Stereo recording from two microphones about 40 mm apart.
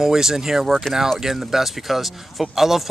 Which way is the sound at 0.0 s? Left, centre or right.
Centre.